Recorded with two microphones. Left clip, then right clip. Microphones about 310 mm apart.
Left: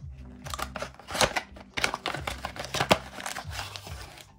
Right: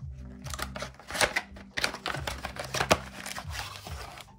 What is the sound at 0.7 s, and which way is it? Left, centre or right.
Typewriter, centre.